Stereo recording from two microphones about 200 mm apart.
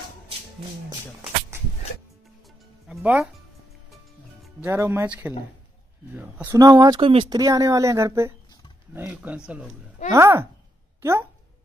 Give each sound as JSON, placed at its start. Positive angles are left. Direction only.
{"t": 2.9, "sound": "speech", "side_deg": -10}
{"t": 4.6, "sound": "speech", "side_deg": -15}